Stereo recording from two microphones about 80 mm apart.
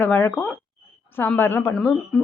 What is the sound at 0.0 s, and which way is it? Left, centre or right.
A woman's voice, left.